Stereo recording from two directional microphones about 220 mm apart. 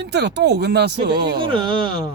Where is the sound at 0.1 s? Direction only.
50° right (ahead or behind).